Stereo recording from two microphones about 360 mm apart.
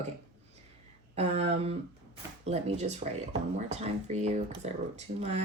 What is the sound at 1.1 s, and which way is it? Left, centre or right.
Speech, centre.